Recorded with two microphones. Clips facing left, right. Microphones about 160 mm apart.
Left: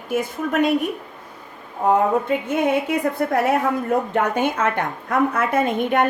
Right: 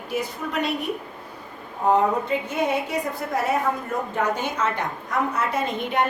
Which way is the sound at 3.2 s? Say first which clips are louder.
Left 4 dB; 60° left (ahead or behind).